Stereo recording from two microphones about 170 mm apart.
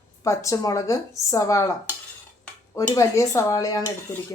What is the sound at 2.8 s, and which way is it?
Speech, 20° left (ahead or behind).